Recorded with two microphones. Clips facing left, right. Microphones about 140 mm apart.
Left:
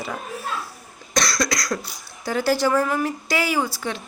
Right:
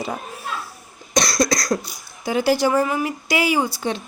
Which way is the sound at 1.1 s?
20° right (ahead or behind).